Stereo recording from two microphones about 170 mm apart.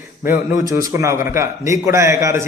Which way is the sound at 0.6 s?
20° right (ahead or behind).